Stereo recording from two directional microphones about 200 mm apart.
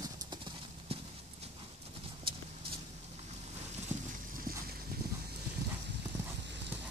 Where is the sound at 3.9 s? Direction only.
35° right (ahead or behind).